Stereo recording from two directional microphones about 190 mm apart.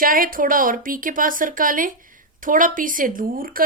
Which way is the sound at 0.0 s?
45° right (ahead or behind).